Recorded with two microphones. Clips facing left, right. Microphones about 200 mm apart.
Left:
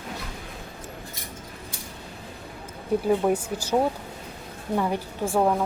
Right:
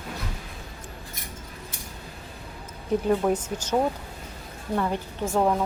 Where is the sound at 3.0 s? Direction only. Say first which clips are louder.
Left 1 dB; 10° left (ahead or behind).